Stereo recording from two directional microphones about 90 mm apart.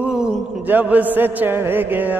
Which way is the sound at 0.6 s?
20° right (ahead or behind).